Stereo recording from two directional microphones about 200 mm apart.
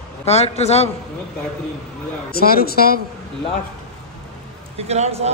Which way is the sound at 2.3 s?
50° left (ahead or behind).